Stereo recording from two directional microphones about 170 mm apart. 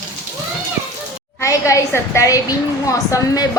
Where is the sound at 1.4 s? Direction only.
20° left (ahead or behind).